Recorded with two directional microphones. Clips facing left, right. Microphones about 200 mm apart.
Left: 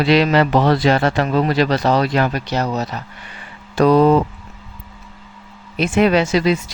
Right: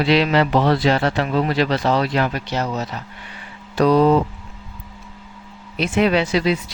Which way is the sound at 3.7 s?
50° left (ahead or behind).